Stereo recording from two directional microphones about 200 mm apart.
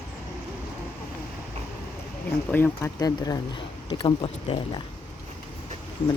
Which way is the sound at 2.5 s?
10° left (ahead or behind).